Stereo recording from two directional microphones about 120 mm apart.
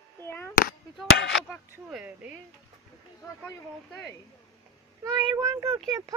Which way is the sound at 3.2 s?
15° left (ahead or behind).